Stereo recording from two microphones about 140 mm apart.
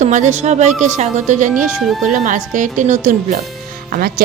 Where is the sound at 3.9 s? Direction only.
90° right.